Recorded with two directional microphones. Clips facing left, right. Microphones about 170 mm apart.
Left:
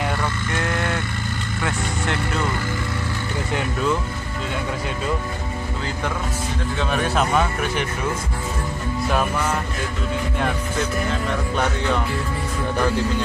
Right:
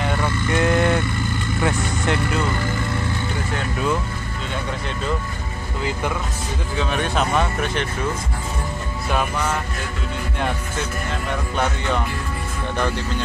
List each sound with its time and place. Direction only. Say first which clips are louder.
0.6 s vehicle: right 7 dB; 20° right (ahead or behind)
6.8 s speech: even; centre (ahead or behind)